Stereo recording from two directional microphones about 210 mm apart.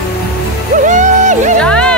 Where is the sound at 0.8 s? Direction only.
35° right (ahead or behind).